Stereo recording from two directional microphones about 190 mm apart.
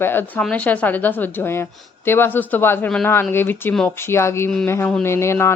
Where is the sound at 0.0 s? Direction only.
10° left (ahead or behind).